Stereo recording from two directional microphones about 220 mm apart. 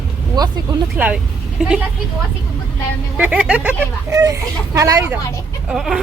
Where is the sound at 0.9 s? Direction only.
5° right (ahead or behind).